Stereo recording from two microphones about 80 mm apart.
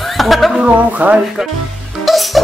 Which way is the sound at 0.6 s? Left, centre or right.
Centre.